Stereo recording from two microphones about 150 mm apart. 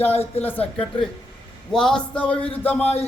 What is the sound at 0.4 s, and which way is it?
A man's voice, 10° left (ahead or behind).